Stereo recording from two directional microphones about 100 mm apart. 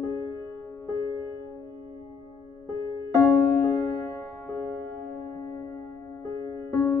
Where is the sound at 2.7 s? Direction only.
25° left (ahead or behind).